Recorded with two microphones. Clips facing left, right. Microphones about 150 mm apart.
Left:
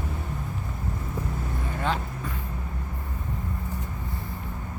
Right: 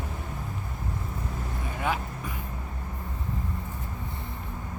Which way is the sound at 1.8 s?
10° right (ahead or behind).